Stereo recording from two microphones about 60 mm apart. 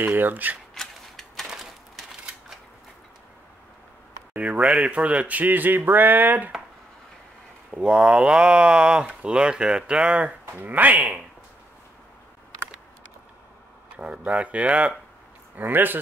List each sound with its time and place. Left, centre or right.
0.0 s speech: right
0.7 s a sound: centre
4.3 s speech: right
4.6 s speech: centre
4.9 s speech: right
7.7 s speech: centre
10.6 s speech: right
11.0 s speech: centre
13.9 s speech: centre
15.5 s speech: right